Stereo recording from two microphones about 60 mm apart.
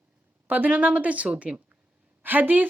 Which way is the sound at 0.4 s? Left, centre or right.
Right.